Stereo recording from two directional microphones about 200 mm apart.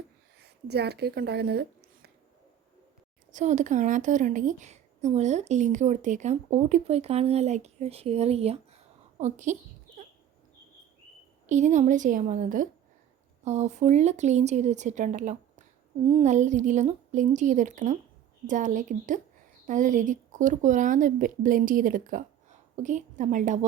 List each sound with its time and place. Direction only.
0.4 s speech: 55° right (ahead or behind)
3.3 s a woman's voice: 35° right (ahead or behind)
11.4 s a woman's voice: 35° right (ahead or behind)